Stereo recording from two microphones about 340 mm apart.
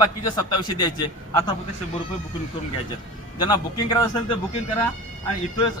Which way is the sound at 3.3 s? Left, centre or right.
Centre.